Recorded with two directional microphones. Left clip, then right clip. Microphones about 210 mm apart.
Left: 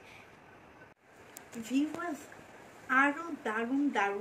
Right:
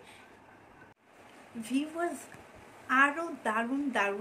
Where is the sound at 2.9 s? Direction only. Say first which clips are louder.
Right 2 dB; 50° right (ahead or behind).